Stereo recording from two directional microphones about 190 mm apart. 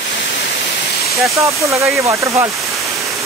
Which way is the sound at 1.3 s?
15° right (ahead or behind).